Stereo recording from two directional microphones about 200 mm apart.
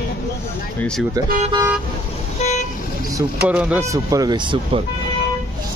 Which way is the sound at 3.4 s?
5° right (ahead or behind).